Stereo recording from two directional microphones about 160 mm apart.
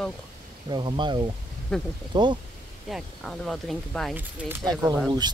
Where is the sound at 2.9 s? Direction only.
5° left (ahead or behind).